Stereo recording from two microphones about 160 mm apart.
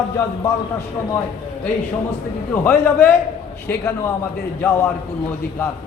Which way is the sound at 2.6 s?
10° left (ahead or behind).